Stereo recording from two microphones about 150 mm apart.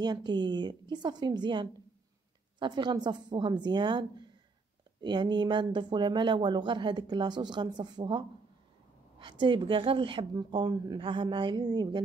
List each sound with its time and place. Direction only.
0.0 s speech: 30° right (ahead or behind)